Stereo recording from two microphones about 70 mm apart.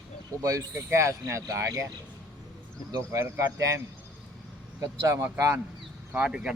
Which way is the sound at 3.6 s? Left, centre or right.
Right.